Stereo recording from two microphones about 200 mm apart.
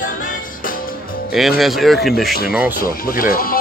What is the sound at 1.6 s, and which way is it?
Speech, centre (ahead or behind).